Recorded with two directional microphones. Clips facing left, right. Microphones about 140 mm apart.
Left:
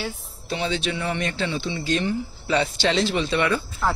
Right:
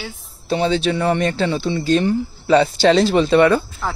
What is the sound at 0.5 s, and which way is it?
Speech, 35° right (ahead or behind).